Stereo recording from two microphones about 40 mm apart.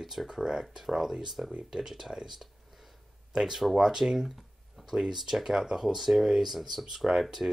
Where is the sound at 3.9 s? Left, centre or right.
Centre.